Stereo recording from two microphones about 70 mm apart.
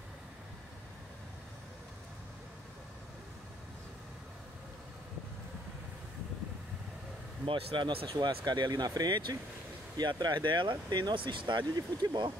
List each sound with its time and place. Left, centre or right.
7.8 s speech: right
9.9 s speech: right